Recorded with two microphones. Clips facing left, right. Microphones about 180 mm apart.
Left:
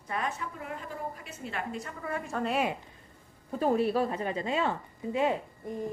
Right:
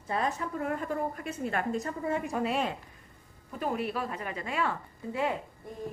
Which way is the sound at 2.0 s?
20° right (ahead or behind).